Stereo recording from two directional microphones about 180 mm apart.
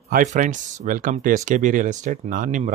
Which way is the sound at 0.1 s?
45° right (ahead or behind).